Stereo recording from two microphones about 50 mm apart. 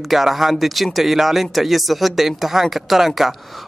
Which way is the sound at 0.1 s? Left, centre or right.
Centre.